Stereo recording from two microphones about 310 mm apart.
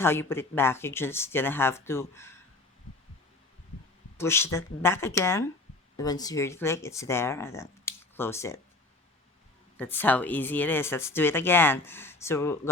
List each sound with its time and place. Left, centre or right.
0.0 s speech: centre
4.2 s speech: centre
9.7 s speech: centre